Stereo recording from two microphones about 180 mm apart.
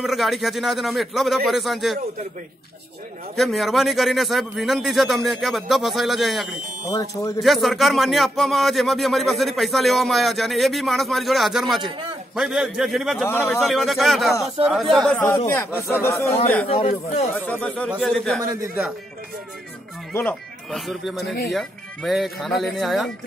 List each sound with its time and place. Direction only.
0.0 s speech: centre (ahead or behind)
3.3 s speech: centre (ahead or behind)
6.9 s speech: 20° left (ahead or behind)
7.3 s speech: centre (ahead or behind)
11.8 s a man's voice: 30° right (ahead or behind)
12.4 s speech: centre (ahead or behind)
13.3 s speech: 15° left (ahead or behind)
13.6 s speech: centre (ahead or behind)
15.2 s speech: 15° left (ahead or behind)
16.6 s speech: 35° left (ahead or behind)
17.5 s speech: 5° left (ahead or behind)
18.4 s a man's voice: 20° right (ahead or behind)
20.1 s speech: 10° left (ahead or behind)
20.7 s speech: centre (ahead or behind)